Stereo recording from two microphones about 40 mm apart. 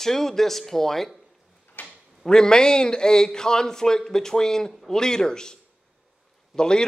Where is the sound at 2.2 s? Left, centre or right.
Centre.